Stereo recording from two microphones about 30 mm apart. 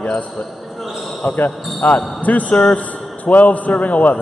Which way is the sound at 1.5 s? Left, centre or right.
Centre.